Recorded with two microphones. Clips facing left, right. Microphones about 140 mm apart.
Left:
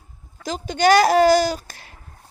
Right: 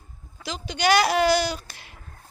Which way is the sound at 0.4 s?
45° left (ahead or behind).